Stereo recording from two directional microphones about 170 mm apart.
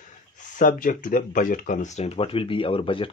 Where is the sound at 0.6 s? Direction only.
50° left (ahead or behind).